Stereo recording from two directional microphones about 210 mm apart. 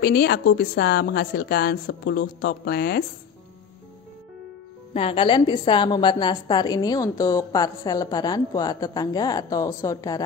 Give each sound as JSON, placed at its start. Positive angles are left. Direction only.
{"t": 0.0, "sound": "a woman's voice", "side_deg": 45}
{"t": 4.9, "sound": "a woman's voice", "side_deg": 25}